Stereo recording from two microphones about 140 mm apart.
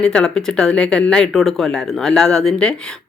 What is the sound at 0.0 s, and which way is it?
Speech, 5° left (ahead or behind).